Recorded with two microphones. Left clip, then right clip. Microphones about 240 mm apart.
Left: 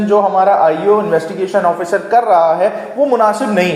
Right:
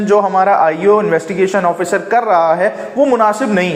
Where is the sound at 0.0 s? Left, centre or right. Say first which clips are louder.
Even; right.